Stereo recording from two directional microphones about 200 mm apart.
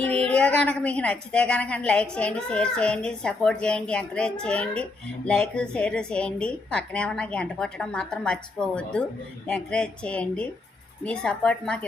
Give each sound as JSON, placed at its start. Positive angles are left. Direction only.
{"t": 0.1, "sound": "a woman's voice", "side_deg": 5}